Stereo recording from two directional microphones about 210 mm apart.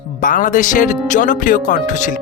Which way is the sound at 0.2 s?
40° left (ahead or behind).